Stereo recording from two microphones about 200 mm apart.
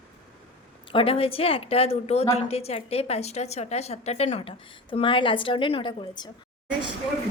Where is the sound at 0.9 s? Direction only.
30° left (ahead or behind).